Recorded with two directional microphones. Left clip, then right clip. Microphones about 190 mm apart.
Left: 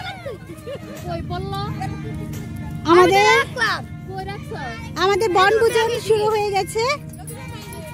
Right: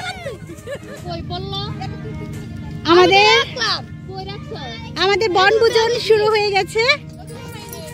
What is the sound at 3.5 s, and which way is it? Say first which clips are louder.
Music: even; 30° left (ahead or behind).